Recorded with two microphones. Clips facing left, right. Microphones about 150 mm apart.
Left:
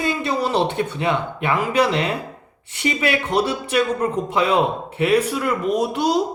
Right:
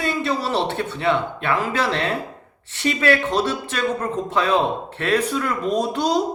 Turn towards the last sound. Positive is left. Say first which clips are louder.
# left 1 dB
turn(degrees=5)  # may be behind; listen again after turning